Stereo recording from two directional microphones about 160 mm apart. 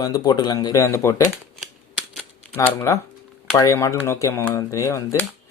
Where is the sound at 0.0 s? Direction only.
25° left (ahead or behind).